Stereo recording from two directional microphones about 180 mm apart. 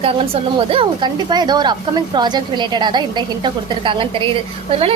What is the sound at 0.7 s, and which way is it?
A woman's voice, 30° right (ahead or behind).